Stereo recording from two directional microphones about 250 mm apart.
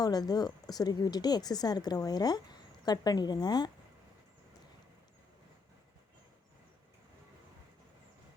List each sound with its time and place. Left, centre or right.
0.0 s a woman's voice: centre